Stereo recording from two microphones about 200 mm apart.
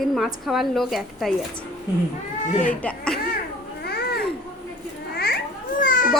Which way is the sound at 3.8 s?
55° left (ahead or behind).